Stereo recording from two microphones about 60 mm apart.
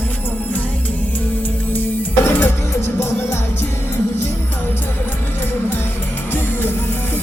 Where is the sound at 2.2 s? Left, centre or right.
Left.